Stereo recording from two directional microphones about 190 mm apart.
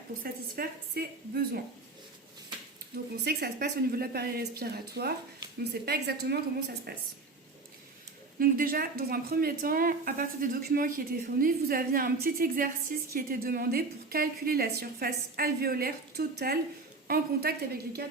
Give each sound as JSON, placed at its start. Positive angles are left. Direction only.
{"t": 0.2, "sound": "speech", "side_deg": -55}
{"t": 2.9, "sound": "a woman's voice", "side_deg": -55}
{"t": 8.4, "sound": "a woman's voice", "side_deg": -50}